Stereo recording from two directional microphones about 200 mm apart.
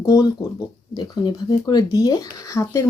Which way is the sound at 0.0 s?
15° left (ahead or behind).